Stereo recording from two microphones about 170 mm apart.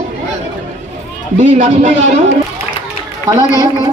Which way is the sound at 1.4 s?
45° right (ahead or behind).